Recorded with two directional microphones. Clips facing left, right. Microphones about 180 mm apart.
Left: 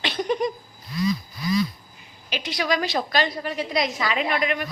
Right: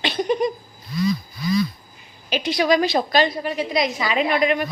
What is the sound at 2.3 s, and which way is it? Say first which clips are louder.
A woman's voice: right 6 dB; 30° right (ahead or behind).